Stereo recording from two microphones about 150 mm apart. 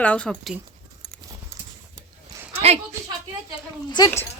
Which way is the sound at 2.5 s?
45° right (ahead or behind).